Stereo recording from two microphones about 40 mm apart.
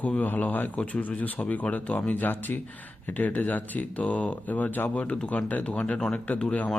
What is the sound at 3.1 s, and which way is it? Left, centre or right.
Speech, left.